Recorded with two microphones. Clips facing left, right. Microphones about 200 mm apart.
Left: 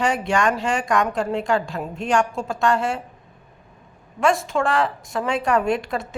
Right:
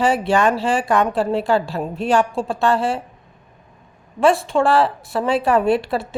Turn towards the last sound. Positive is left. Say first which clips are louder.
# right 4 dB
turn(degrees=-35)  # may be behind; listen again after turning